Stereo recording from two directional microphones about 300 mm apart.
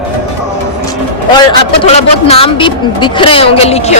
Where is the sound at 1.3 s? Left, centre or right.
Centre.